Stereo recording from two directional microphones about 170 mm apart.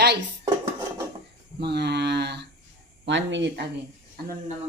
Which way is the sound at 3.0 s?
90° right.